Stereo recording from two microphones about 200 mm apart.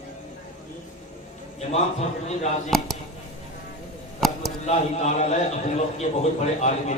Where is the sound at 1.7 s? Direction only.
35° left (ahead or behind).